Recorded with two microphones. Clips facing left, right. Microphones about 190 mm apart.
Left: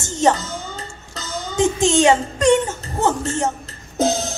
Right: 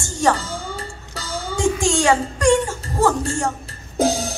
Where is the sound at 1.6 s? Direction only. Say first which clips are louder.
Left 4 dB; 20° left (ahead or behind).